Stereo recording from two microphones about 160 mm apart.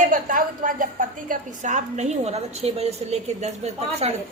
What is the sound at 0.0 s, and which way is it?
A woman's voice, 55° right (ahead or behind).